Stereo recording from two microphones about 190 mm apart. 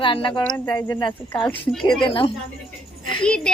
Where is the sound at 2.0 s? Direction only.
25° left (ahead or behind).